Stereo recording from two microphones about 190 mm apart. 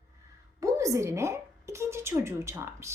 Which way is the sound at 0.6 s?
15° right (ahead or behind).